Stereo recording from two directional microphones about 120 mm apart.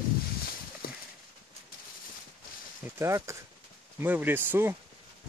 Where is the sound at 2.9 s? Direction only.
25° right (ahead or behind).